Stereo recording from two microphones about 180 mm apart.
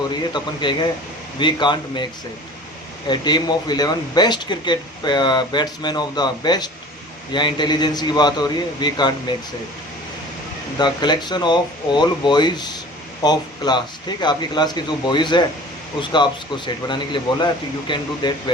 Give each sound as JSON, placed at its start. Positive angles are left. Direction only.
{"t": 0.1, "sound": "speech", "side_deg": 25}
{"t": 3.1, "sound": "speech", "side_deg": 25}
{"t": 10.8, "sound": "speech", "side_deg": 25}